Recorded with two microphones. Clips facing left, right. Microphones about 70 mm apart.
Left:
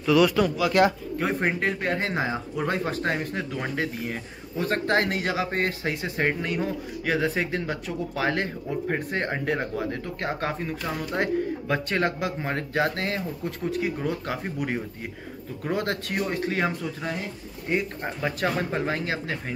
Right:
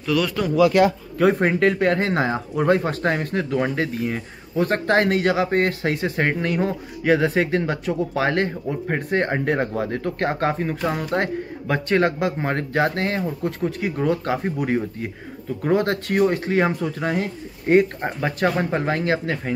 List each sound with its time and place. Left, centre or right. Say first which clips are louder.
0.0 s speech: left 2 dB; centre
1.4 s speech: right 7 dB; right
2.0 s speech: right 5 dB; right
11.0 s speech: right 2 dB; right
11.7 s speech: right 7 dB; right
18.0 s speech: right 5 dB; right